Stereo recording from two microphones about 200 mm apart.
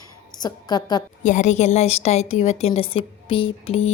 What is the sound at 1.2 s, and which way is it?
A woman's voice, 40° left (ahead or behind).